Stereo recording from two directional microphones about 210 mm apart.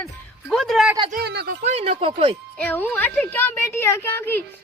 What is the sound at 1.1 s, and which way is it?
Speech, 50° right (ahead or behind).